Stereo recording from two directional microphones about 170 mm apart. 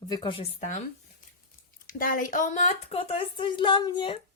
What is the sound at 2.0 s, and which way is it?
A woman's voice, 50° left (ahead or behind).